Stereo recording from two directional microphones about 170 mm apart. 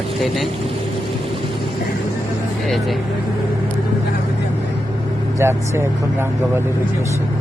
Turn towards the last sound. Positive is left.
turn(degrees=-15)  # may be behind; listen again after turning